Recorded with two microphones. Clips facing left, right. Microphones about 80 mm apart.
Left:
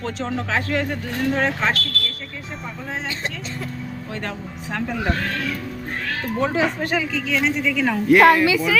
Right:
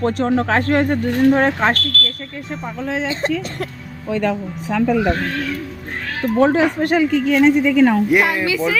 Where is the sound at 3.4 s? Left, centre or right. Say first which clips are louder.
Right 5 dB; right.